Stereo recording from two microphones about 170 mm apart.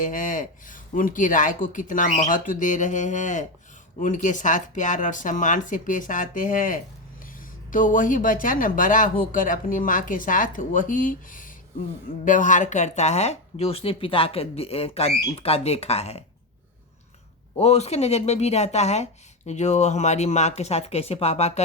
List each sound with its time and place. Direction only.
0.0 s speech: 50° left (ahead or behind)
17.6 s speech: 40° left (ahead or behind)